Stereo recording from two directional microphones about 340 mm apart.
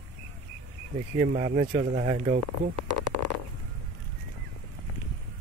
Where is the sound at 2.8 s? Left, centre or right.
Right.